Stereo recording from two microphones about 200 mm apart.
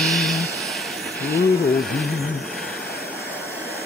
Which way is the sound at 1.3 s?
50° left (ahead or behind).